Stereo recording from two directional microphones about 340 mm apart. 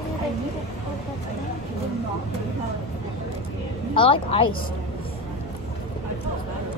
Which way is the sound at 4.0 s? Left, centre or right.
Centre.